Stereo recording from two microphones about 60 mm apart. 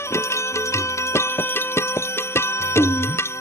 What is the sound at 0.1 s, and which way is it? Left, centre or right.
Music, left.